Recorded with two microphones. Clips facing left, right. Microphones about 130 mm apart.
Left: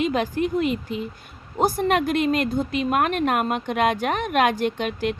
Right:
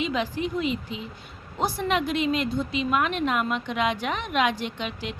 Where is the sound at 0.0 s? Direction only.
50° left (ahead or behind).